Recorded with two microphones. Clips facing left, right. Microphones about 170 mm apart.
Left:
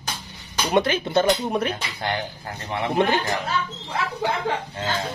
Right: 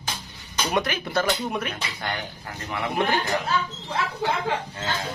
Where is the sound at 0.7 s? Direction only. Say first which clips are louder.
Left 6 dB; 25° left (ahead or behind).